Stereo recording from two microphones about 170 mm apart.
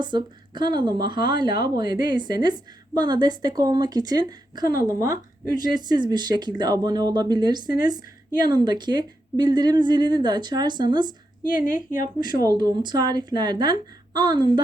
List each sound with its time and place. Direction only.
0.0 s speech: 25° right (ahead or behind)
11.5 s a woman's voice: 55° left (ahead or behind)
12.2 s speech: 25° right (ahead or behind)